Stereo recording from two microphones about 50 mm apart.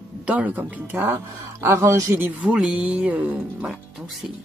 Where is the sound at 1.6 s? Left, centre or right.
Right.